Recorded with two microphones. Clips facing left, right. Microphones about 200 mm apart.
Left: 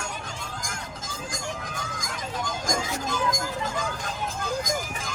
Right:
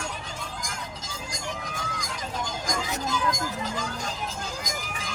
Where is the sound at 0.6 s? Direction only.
50° left (ahead or behind).